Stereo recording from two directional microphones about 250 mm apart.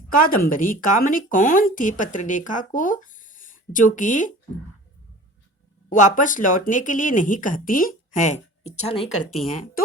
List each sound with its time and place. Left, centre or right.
0.2 s speech: left
5.9 s speech: left